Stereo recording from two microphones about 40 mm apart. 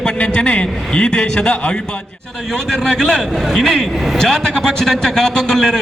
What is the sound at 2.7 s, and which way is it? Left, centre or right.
A man's voice, centre.